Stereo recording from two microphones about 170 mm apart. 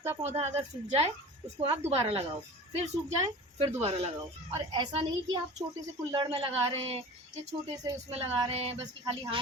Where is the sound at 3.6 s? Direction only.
35° right (ahead or behind).